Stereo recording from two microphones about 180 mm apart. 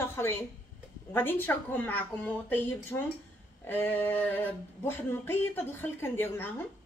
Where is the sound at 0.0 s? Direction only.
15° left (ahead or behind).